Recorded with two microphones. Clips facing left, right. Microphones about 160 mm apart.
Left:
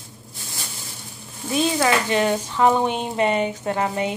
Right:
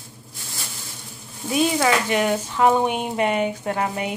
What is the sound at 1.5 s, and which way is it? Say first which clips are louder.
Speech: even; 10° right (ahead or behind).